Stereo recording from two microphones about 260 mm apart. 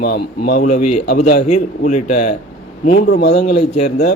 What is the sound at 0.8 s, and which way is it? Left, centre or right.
Speech, left.